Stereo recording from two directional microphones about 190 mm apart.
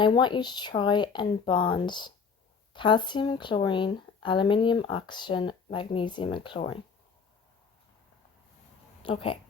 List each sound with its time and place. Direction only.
0.0 s speech: 25° left (ahead or behind)
9.0 s speech: 30° left (ahead or behind)